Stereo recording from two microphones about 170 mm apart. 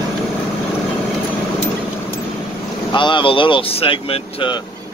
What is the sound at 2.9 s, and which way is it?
Speech, 30° left (ahead or behind).